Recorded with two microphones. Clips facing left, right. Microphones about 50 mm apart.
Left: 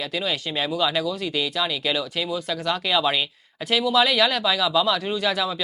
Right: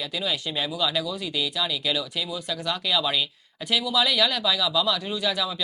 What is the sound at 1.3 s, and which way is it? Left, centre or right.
Speech, centre.